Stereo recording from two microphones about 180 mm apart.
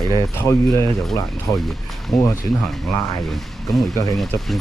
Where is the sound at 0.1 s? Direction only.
15° left (ahead or behind).